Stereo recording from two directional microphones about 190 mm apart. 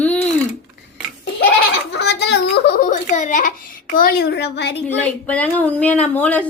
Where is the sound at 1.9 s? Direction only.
60° left (ahead or behind).